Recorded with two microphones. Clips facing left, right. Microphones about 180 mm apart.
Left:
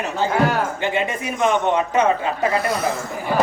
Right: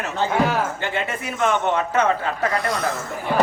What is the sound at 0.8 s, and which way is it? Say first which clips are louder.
A man's voice: left 4 dB; 15° left (ahead or behind).